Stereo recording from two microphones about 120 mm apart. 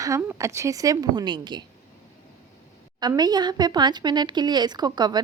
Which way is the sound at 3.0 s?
35° right (ahead or behind).